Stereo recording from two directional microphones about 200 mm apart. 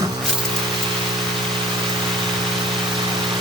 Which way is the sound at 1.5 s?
25° right (ahead or behind).